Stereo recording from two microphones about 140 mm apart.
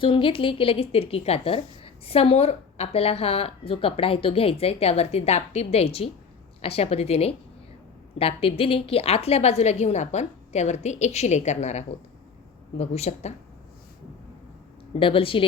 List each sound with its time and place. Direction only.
0.0 s a woman's voice: 40° left (ahead or behind)
14.9 s speech: 40° left (ahead or behind)